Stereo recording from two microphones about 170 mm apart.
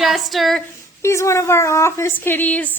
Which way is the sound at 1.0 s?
15° left (ahead or behind).